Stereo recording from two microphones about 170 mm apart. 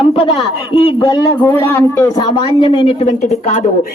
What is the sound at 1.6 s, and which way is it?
Speech, 15° left (ahead or behind).